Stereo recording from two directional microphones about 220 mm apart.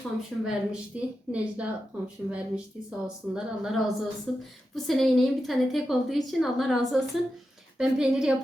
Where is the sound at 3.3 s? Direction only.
Centre (ahead or behind).